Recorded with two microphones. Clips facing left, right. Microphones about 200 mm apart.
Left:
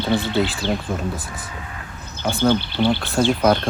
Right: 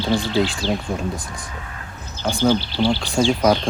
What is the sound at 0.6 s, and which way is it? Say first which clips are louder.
Speech: even; 55° left (ahead or behind).